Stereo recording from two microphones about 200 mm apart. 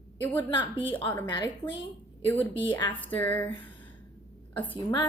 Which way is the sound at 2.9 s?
10° left (ahead or behind).